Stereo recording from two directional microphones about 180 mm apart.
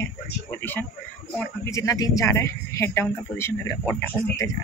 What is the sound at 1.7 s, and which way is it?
Speech, 15° left (ahead or behind).